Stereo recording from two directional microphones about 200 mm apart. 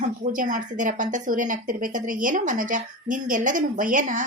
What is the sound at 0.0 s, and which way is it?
A woman's voice, 40° right (ahead or behind).